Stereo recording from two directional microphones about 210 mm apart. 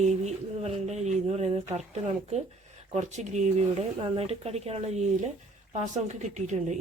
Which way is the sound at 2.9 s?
35° right (ahead or behind).